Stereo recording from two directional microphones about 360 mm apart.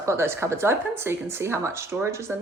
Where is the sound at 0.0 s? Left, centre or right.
Centre.